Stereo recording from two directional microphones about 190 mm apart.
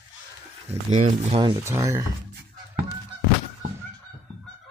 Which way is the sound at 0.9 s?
35° right (ahead or behind).